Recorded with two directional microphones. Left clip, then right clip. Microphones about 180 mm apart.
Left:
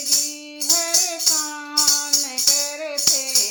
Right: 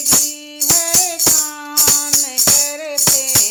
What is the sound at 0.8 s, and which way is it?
Music, 50° right (ahead or behind).